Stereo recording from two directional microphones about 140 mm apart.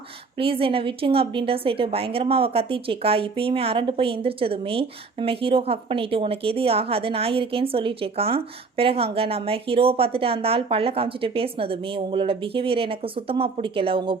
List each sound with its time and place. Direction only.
0.3 s a woman's voice: 40° right (ahead or behind)